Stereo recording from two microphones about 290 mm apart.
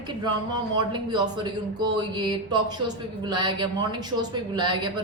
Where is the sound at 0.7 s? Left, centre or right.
Centre.